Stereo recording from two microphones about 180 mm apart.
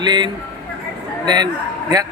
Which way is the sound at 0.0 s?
25° right (ahead or behind).